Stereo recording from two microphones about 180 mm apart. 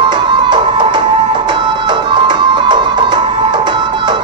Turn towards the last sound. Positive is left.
turn(degrees=-25)  # may be behind; listen again after turning